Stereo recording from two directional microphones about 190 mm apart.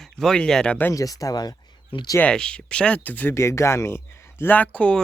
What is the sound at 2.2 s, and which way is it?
Speech, 5° left (ahead or behind).